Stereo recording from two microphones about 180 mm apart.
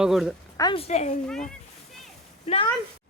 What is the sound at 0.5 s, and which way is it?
Speech, 20° left (ahead or behind).